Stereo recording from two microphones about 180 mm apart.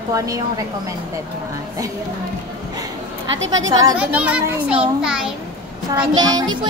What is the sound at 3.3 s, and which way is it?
Speech, 90° right.